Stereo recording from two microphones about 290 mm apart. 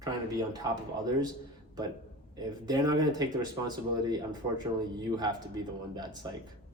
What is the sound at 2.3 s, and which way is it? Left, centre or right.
Speech, centre.